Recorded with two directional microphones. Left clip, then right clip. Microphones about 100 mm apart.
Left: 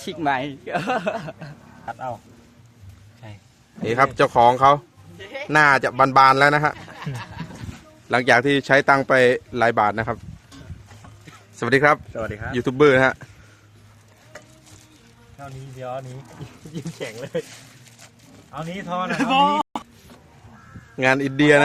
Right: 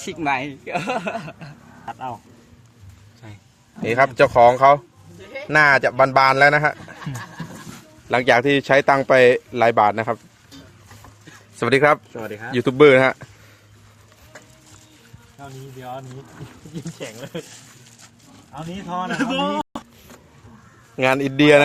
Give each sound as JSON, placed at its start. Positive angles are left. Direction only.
{"t": 0.0, "sound": "speech", "side_deg": 0}
{"t": 3.8, "sound": "speech", "side_deg": 10}
{"t": 8.1, "sound": "speech", "side_deg": 5}
{"t": 11.5, "sound": "speech", "side_deg": -15}
{"t": 12.1, "sound": "speech", "side_deg": 0}
{"t": 12.5, "sound": "speech", "side_deg": -15}
{"t": 17.0, "sound": "speech", "side_deg": 20}
{"t": 18.5, "sound": "speech", "side_deg": 20}
{"t": 20.9, "sound": "speech", "side_deg": -5}